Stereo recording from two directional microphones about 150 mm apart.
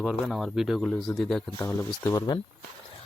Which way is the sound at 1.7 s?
20° left (ahead or behind).